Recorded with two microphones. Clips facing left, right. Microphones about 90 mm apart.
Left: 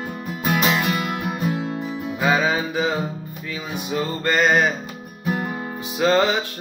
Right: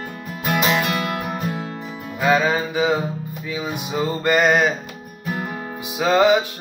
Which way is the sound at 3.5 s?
15° right (ahead or behind).